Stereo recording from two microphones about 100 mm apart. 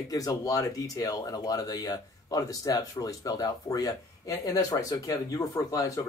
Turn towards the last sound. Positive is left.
turn(degrees=30)  # may be behind; listen again after turning